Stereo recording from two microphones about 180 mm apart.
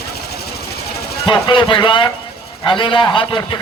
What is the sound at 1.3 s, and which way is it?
A man's voice, 25° left (ahead or behind).